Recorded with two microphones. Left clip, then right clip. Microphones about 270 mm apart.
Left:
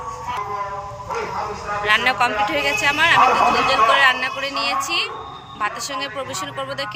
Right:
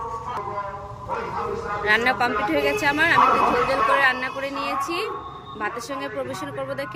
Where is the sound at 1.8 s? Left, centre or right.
Centre.